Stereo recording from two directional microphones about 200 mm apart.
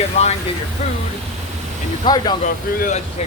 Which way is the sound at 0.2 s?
30° left (ahead or behind).